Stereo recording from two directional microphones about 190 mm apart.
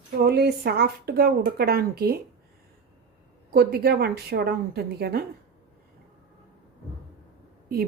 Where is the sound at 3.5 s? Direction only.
55° right (ahead or behind).